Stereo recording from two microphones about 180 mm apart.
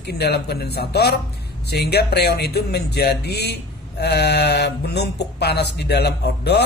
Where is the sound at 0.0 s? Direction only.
65° left (ahead or behind).